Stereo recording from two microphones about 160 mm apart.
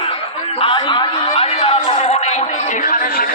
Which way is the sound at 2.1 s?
45° left (ahead or behind).